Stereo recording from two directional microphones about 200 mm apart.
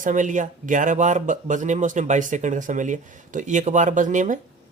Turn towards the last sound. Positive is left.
turn(degrees=-40)  # may be behind; listen again after turning